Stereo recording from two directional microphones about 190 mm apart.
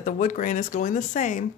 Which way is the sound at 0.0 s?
40° left (ahead or behind).